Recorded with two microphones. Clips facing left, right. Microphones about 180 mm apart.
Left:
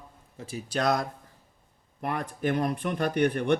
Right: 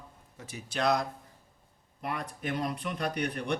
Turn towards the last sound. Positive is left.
turn(degrees=55)  # may be behind; listen again after turning